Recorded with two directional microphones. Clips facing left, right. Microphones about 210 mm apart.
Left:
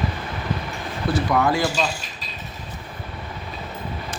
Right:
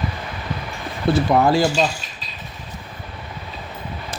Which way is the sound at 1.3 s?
30° right (ahead or behind).